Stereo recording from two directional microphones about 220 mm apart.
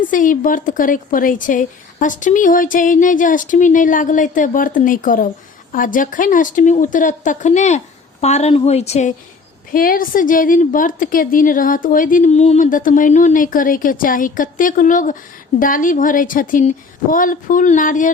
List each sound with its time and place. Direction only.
0.0 s a woman's voice: 35° left (ahead or behind)